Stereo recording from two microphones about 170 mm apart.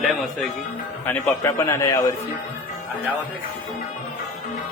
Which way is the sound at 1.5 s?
15° left (ahead or behind).